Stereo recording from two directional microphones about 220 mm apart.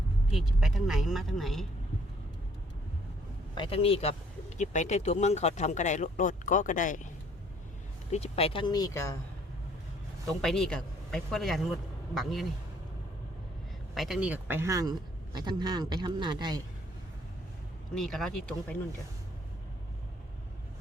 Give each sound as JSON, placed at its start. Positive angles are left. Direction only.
{"t": 0.3, "sound": "speech", "side_deg": 0}
{"t": 3.5, "sound": "speech", "side_deg": 25}
{"t": 8.1, "sound": "speech", "side_deg": 25}
{"t": 10.4, "sound": "speech", "side_deg": 0}
{"t": 13.9, "sound": "a man's voice", "side_deg": 0}
{"t": 17.9, "sound": "speech", "side_deg": 0}